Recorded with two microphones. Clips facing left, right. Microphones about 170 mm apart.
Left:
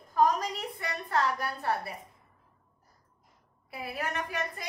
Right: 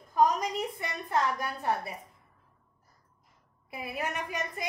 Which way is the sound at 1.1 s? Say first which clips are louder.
Even; 20° right (ahead or behind).